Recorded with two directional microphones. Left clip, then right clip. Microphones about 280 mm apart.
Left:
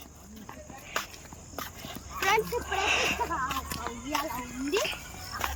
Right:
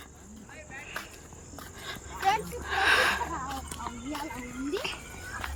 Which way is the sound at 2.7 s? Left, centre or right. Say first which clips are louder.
Right 5 dB; centre.